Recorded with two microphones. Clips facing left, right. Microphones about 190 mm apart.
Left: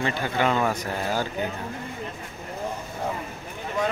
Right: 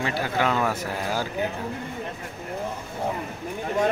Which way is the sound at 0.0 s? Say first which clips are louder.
Even; 5° right (ahead or behind).